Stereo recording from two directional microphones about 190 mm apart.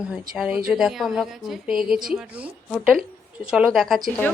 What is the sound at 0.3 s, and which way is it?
Speech, centre (ahead or behind).